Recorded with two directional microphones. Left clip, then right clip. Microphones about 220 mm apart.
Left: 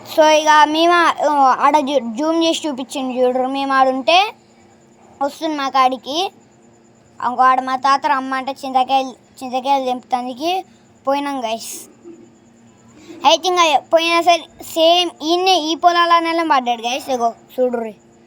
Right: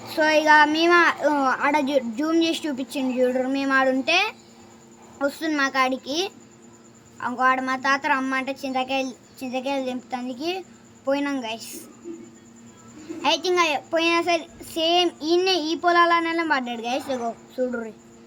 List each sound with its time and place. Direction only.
0.1 s a woman's voice: 30° left (ahead or behind)
13.2 s a child's voice: 30° left (ahead or behind)